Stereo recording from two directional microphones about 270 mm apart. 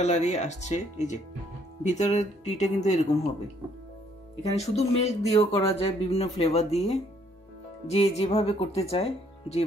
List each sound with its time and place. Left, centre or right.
0.0 s speech: left
4.4 s speech: left